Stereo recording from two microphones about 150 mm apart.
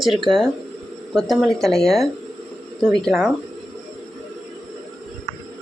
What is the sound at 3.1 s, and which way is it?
Speech, 5° right (ahead or behind).